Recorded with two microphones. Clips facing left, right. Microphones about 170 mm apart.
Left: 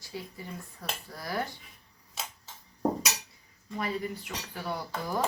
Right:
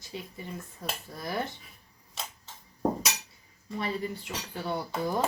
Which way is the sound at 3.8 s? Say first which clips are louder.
Even; 25° right (ahead or behind).